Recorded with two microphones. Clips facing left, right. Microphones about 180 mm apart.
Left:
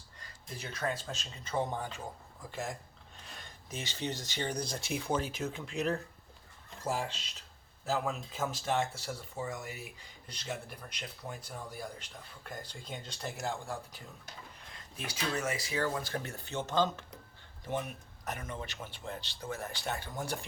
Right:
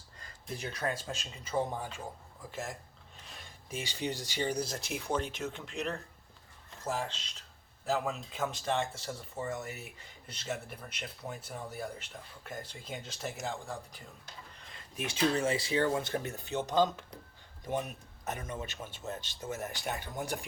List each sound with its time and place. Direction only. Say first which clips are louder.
0.6 s speech: even; 10° right (ahead or behind)
6.8 s speech: left 1 dB; 10° left (ahead or behind)
7.9 s speech: right 1 dB; centre (ahead or behind)
14.9 s speech: right 6 dB; 25° right (ahead or behind)
18.3 s speech: right 2 dB; 20° right (ahead or behind)